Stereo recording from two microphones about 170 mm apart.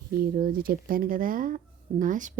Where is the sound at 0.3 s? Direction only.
60° right (ahead or behind).